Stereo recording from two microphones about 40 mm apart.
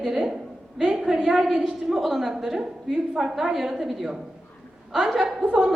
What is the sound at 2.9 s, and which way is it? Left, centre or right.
Speech, centre.